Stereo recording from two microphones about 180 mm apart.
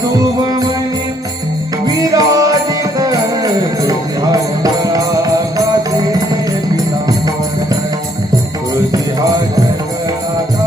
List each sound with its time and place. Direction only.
0.2 s music: 20° right (ahead or behind)
2.0 s music: 20° right (ahead or behind)